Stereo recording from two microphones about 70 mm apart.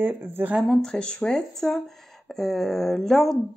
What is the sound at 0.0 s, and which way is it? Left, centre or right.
Speech, right.